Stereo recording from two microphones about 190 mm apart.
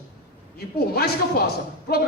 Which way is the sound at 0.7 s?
55° left (ahead or behind).